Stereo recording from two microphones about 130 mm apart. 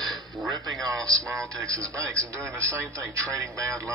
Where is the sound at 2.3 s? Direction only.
25° right (ahead or behind).